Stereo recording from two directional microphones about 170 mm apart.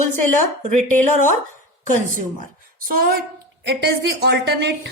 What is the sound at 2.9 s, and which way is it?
Speech, 60° right (ahead or behind).